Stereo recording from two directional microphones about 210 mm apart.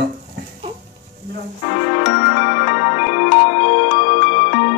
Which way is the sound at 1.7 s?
30° left (ahead or behind).